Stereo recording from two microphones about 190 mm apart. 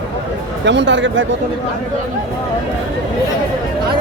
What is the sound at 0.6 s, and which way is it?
Speech, 65° right (ahead or behind).